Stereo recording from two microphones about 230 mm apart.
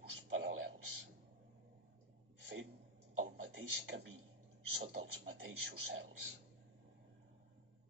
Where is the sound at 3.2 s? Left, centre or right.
Right.